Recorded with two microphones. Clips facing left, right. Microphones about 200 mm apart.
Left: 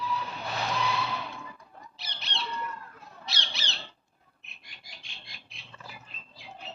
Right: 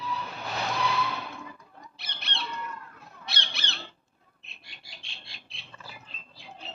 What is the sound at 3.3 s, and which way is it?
Squawk, 55° right (ahead or behind).